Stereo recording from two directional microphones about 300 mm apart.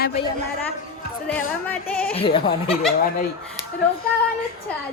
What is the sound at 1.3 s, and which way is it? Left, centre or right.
Speech, centre.